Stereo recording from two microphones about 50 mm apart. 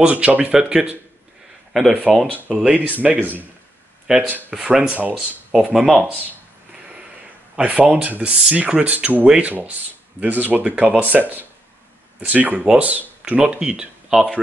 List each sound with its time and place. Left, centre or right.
0.0 s speech: right
0.5 s speech: right
1.7 s speech: centre
2.6 s speech: right
4.6 s speech: centre
4.9 s speech: right
5.5 s speech: centre
7.5 s speech: right
9.5 s speech: right
14.1 s speech: centre